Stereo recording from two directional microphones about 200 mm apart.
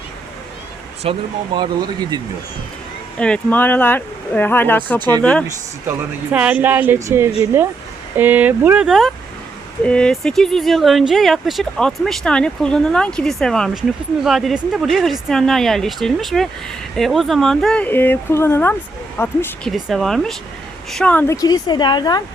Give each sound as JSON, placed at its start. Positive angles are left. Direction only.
{"t": 1.0, "sound": "speech", "side_deg": -30}
{"t": 3.2, "sound": "speech", "side_deg": 5}
{"t": 4.9, "sound": "speech", "side_deg": -20}
{"t": 5.2, "sound": "speech", "side_deg": 5}
{"t": 6.3, "sound": "speech", "side_deg": -5}
{"t": 21.4, "sound": "a woman's voice", "side_deg": 20}